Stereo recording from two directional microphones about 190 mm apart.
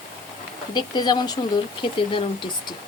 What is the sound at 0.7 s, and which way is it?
Speech, 20° left (ahead or behind).